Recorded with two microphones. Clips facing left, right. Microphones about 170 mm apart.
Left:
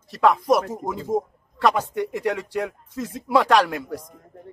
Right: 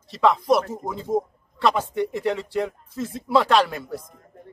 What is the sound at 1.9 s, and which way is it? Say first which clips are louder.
Speech: right 1 dB; 35° right (ahead or behind).